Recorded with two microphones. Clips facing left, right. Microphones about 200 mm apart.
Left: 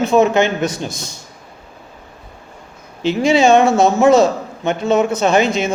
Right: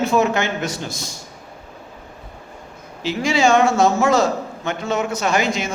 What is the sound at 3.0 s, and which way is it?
A man's voice, 20° left (ahead or behind).